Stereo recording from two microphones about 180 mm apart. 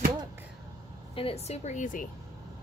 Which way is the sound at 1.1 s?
30° left (ahead or behind).